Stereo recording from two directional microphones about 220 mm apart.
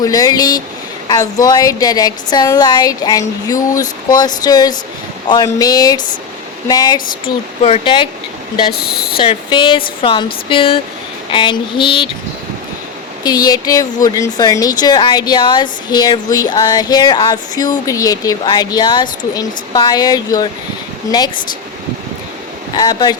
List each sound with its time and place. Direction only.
0.0 s speech: 15° left (ahead or behind)
8.7 s speech: 45° left (ahead or behind)
9.1 s speech: 25° left (ahead or behind)
13.2 s speech: 15° left (ahead or behind)
22.7 s speech: 20° left (ahead or behind)